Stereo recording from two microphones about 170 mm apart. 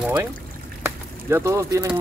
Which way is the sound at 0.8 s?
15° right (ahead or behind).